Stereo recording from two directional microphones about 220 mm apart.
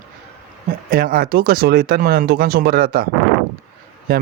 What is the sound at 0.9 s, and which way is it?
Speech, 40° right (ahead or behind).